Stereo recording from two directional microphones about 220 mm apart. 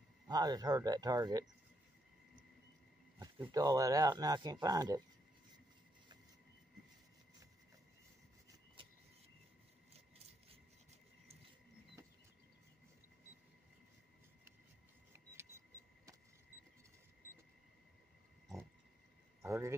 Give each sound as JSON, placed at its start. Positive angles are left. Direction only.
{"t": 0.3, "sound": "speech", "side_deg": -20}
{"t": 3.2, "sound": "speech", "side_deg": -20}
{"t": 9.9, "sound": "scissors", "side_deg": -25}
{"t": 19.4, "sound": "speech", "side_deg": -15}